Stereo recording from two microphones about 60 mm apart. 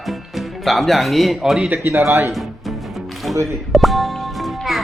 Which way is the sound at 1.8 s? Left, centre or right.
Right.